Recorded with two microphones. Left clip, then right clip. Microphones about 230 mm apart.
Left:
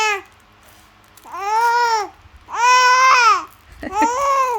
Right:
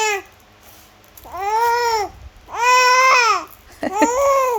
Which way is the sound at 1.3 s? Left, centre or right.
Centre.